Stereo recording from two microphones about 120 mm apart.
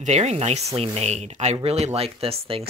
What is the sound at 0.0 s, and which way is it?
Speech, 70° right (ahead or behind).